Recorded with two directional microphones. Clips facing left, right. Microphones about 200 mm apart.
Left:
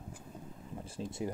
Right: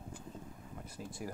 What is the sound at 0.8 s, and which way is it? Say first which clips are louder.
Speech: left 6 dB; 25° left (ahead or behind).